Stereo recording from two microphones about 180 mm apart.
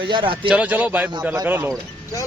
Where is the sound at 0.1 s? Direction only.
25° right (ahead or behind).